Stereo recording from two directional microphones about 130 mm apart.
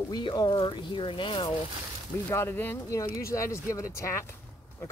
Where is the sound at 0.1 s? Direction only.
35° left (ahead or behind).